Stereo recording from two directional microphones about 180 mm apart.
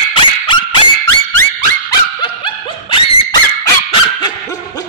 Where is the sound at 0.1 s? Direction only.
30° left (ahead or behind).